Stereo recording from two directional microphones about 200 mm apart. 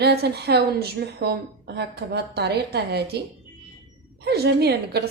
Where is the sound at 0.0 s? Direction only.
55° right (ahead or behind).